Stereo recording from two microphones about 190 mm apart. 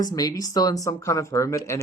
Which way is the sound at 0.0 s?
20° left (ahead or behind).